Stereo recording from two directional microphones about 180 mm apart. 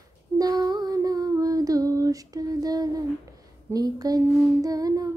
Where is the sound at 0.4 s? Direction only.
20° right (ahead or behind).